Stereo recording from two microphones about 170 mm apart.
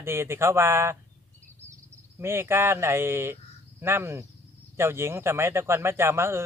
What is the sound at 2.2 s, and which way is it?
Speech, 15° right (ahead or behind).